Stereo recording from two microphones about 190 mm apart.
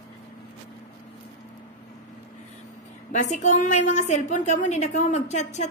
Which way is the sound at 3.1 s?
40° left (ahead or behind).